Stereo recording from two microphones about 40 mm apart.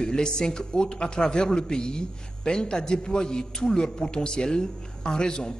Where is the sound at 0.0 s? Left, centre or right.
Centre.